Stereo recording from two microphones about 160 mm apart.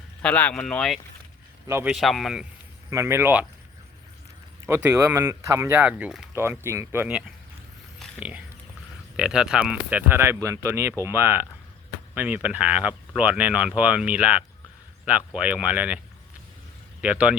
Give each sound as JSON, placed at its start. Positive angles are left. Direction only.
{"t": 0.2, "sound": "speech", "side_deg": 10}
{"t": 1.6, "sound": "a man's voice", "side_deg": -15}
{"t": 1.9, "sound": "speech", "side_deg": 0}
{"t": 2.9, "sound": "speech", "side_deg": -15}
{"t": 4.6, "sound": "speech", "side_deg": -15}
{"t": 6.3, "sound": "speech", "side_deg": -15}
{"t": 8.2, "sound": "a sound", "side_deg": -10}
{"t": 9.1, "sound": "speech", "side_deg": -5}
{"t": 17.0, "sound": "speech", "side_deg": -5}